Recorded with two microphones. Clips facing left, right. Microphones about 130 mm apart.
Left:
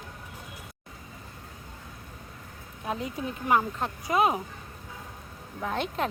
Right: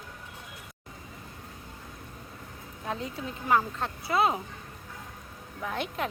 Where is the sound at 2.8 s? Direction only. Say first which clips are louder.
Left 3 dB; 15° left (ahead or behind).